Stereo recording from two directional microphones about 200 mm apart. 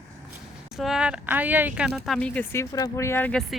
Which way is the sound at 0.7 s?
Centre (ahead or behind).